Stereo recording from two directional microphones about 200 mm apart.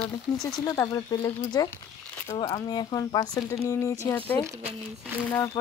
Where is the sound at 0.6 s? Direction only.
15° left (ahead or behind).